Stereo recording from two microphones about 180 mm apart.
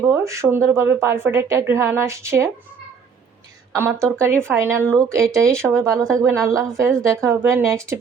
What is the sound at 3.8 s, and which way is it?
Speech, 15° right (ahead or behind).